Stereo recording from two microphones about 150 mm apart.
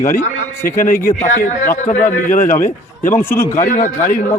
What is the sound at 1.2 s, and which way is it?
A man's voice, 55° left (ahead or behind).